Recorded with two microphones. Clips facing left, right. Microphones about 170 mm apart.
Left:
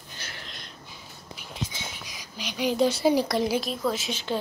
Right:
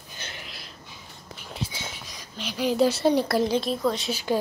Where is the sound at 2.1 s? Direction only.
Centre (ahead or behind).